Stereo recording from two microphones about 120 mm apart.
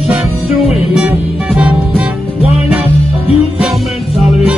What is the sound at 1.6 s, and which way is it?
Music, 10° right (ahead or behind).